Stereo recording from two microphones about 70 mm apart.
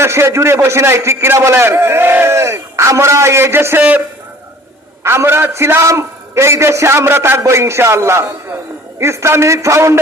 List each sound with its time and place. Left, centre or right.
0.0 s a man's voice: right
5.0 s a man's voice: right